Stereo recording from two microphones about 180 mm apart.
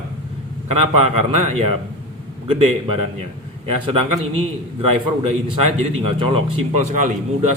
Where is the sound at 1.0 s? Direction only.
35° right (ahead or behind).